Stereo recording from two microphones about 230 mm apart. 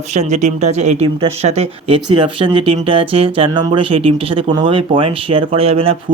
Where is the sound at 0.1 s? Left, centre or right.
Right.